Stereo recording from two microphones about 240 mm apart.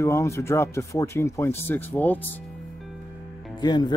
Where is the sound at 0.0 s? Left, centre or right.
Centre.